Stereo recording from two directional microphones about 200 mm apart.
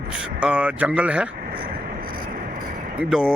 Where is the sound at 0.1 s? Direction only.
5° right (ahead or behind).